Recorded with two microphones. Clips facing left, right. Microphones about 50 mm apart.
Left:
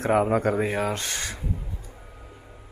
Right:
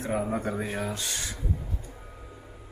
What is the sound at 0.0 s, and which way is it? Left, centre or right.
Speech, left.